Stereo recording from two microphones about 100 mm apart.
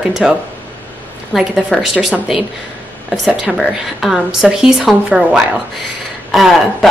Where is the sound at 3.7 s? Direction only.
5° right (ahead or behind).